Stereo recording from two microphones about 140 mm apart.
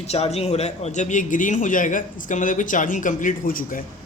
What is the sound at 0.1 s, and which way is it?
Speech, 50° left (ahead or behind).